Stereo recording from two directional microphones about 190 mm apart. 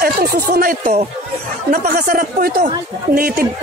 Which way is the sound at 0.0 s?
50° right (ahead or behind).